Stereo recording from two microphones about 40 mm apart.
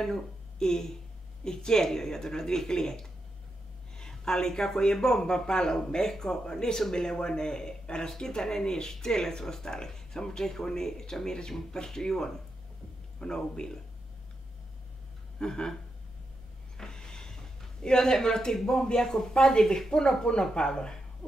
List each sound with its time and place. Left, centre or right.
0.0 s speech: centre
4.0 s a sound: centre
4.6 s a man's voice: centre
15.3 s a sound: centre
16.7 s speech: centre
21.2 s heart sounds: left